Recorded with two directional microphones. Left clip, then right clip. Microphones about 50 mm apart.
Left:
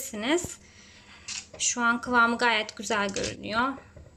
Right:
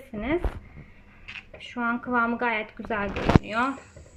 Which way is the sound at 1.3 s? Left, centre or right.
Left.